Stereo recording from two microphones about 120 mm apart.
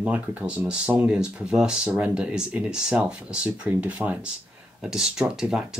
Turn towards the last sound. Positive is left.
turn(degrees=-5)  # may be behind; listen again after turning